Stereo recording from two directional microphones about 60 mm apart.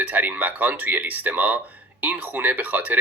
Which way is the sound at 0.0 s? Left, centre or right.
Right.